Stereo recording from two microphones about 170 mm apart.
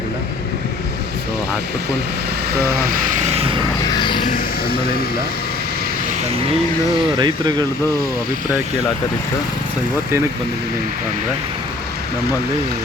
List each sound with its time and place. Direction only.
2.6 s vehicle: 60° right (ahead or behind); by 3.6 s 35° right (ahead or behind)
3.9 s a sound: 25° left (ahead or behind)
4.3 s speech: 60° left (ahead or behind)
7.2 s speech: 25° right (ahead or behind)